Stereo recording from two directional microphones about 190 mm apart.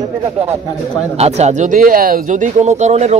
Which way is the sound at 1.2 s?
35° right (ahead or behind).